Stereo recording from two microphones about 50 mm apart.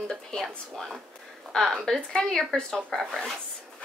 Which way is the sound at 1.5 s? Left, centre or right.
Centre.